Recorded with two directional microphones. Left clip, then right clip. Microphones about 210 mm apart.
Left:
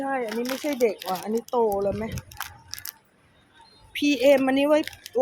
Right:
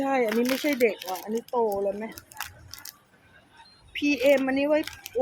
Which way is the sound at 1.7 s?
15° left (ahead or behind).